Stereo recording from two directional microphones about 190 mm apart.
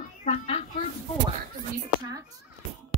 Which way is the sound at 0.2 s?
35° left (ahead or behind).